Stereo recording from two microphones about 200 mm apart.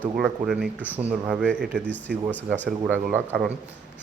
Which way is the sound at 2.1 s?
50° right (ahead or behind).